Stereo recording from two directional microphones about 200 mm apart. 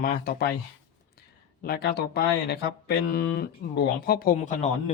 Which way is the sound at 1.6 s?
50° left (ahead or behind).